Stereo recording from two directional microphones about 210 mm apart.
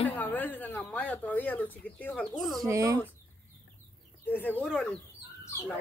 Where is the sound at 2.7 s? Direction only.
15° right (ahead or behind).